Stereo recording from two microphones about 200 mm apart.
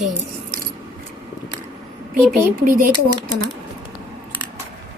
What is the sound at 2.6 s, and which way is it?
Speech, 45° right (ahead or behind).